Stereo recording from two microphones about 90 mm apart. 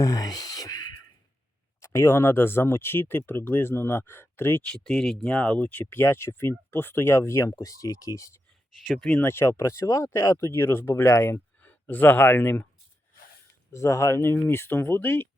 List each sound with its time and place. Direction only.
0.0 s a sound: 45° left (ahead or behind)
1.8 s speech: 35° left (ahead or behind)
4.6 s speech: 10° left (ahead or behind); by 8.4 s 35° left (ahead or behind)
9.0 s speech: 10° left (ahead or behind)
9.2 s speech: 25° left (ahead or behind)
13.7 s speech: 35° left (ahead or behind)